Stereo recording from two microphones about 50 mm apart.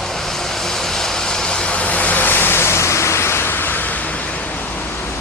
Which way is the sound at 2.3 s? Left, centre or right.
Left.